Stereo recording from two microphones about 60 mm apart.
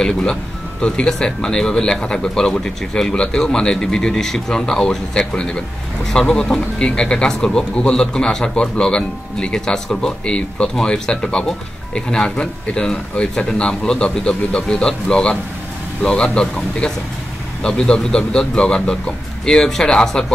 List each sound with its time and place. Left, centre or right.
0.0 s speech: centre